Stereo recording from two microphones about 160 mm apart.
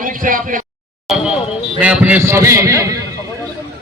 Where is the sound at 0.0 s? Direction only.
55° right (ahead or behind).